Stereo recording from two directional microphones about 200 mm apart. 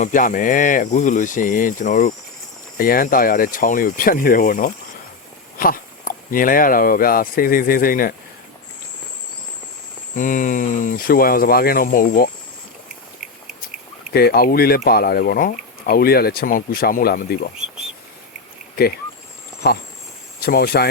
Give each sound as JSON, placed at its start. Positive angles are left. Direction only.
{"t": 0.0, "sound": "speech", "side_deg": 40}
{"t": 10.2, "sound": "speech", "side_deg": 40}
{"t": 14.1, "sound": "speech", "side_deg": 50}
{"t": 19.6, "sound": "speech", "side_deg": 55}